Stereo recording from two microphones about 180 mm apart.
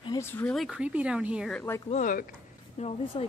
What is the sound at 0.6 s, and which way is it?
Speech, 5° right (ahead or behind).